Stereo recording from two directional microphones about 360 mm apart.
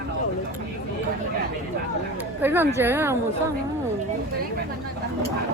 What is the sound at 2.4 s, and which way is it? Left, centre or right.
Speech, centre.